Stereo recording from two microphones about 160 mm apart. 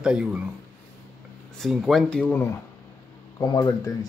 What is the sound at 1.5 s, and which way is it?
Speech, centre (ahead or behind).